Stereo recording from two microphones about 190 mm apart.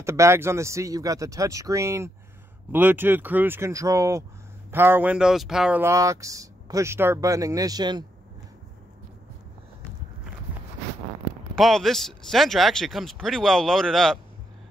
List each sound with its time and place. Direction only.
0.0 s speech: 15° right (ahead or behind)
11.5 s speech: centre (ahead or behind)